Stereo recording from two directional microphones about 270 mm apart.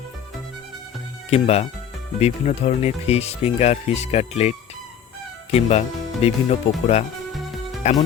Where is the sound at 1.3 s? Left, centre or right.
Left.